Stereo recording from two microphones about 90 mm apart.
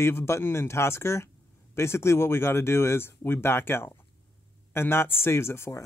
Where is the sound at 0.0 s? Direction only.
30° left (ahead or behind).